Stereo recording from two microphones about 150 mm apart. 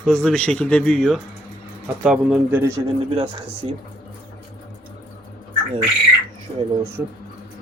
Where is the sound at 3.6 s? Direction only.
40° right (ahead or behind).